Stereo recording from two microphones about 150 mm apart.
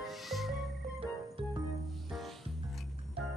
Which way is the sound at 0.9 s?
40° right (ahead or behind).